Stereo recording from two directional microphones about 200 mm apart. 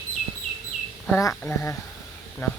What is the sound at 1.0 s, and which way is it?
Speech, 10° left (ahead or behind).